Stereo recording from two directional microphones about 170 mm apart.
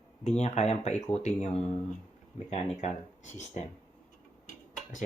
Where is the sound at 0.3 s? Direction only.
40° left (ahead or behind).